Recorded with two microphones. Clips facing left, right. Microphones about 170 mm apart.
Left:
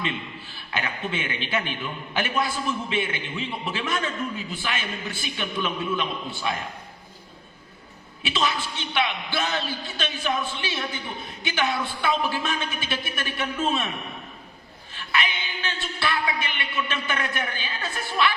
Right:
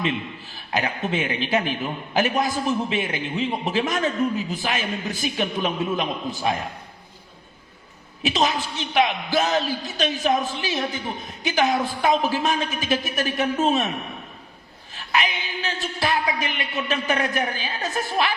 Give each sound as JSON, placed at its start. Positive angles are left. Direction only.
{"t": 0.5, "sound": "a man's voice", "side_deg": -40}
{"t": 8.2, "sound": "a man's voice", "side_deg": -40}
{"t": 14.9, "sound": "a woman's voice", "side_deg": -40}